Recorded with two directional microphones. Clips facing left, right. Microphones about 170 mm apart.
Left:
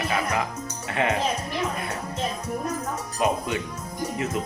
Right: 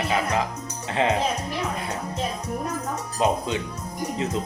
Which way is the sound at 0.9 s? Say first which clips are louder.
Right 2 dB; 25° right (ahead or behind).